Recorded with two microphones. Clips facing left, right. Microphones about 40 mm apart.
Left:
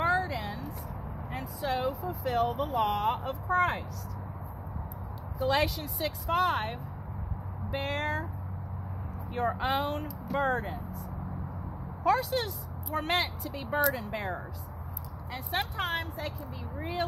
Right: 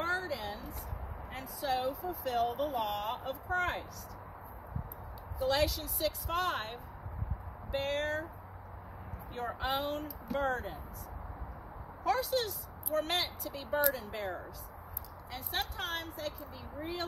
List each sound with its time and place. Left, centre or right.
0.0 s a sound: left
1.3 s speech: left
5.4 s speech: left
9.3 s speech: left
12.0 s speech: left